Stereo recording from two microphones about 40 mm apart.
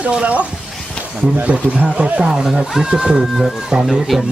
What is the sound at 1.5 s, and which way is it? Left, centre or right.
Speech, right.